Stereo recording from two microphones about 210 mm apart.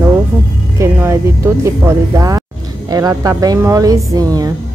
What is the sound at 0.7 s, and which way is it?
Music, 10° right (ahead or behind).